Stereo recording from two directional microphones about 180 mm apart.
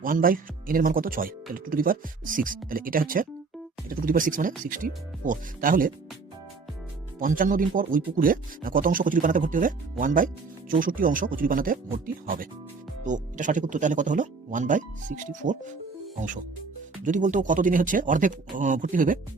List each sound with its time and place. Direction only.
0.0 s speech: 50° right (ahead or behind)
7.2 s speech: 45° right (ahead or behind)
17.0 s speech: 45° right (ahead or behind)